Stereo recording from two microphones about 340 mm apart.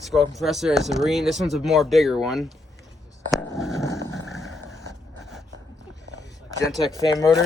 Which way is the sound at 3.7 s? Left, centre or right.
Centre.